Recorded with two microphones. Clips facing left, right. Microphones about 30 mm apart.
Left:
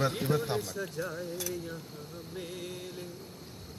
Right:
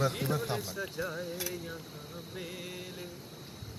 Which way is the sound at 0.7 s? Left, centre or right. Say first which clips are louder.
Left 1 dB; centre.